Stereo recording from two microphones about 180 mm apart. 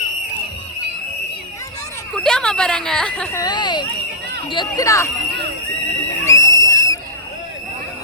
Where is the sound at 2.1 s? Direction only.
5° left (ahead or behind).